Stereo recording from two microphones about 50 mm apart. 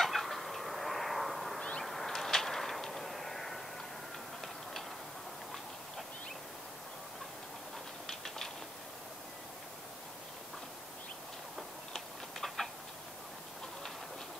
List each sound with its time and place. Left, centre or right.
0.0 s cat: centre
1.6 s honk: centre
1.9 s vehicle: centre
8.1 s a sound: centre
11.9 s tick-tock: centre